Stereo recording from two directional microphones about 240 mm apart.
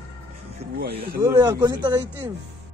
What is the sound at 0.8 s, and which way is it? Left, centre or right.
Speech, right.